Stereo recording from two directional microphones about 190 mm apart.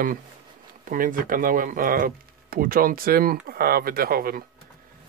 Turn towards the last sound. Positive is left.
turn(degrees=-50)  # may be behind; listen again after turning